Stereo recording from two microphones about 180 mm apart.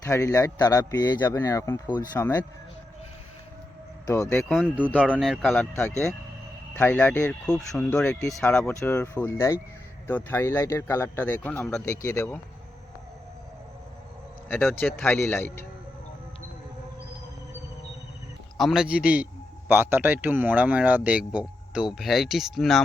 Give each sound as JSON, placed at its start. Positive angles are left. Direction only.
{"t": 0.0, "sound": "speech", "side_deg": 15}
{"t": 4.0, "sound": "speech", "side_deg": 15}
{"t": 4.5, "sound": "speech", "side_deg": -5}
{"t": 6.7, "sound": "speech", "side_deg": 10}
{"t": 14.4, "sound": "speech", "side_deg": 10}
{"t": 18.5, "sound": "a man's voice", "side_deg": 0}